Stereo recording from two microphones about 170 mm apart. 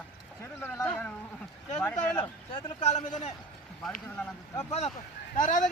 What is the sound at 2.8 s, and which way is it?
Speech, 45° left (ahead or behind).